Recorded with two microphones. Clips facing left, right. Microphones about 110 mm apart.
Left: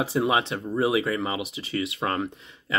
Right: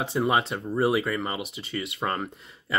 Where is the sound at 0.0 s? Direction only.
Centre (ahead or behind).